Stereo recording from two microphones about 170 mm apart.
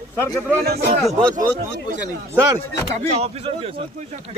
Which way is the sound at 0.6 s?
65° right (ahead or behind).